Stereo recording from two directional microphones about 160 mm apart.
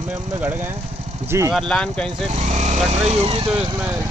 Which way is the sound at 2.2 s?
45° right (ahead or behind).